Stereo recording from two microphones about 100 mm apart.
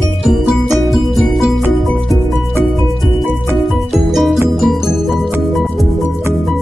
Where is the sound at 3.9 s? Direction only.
Centre (ahead or behind).